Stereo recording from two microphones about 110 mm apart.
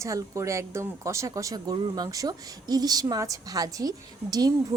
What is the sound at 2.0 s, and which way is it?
A woman's voice, 35° right (ahead or behind).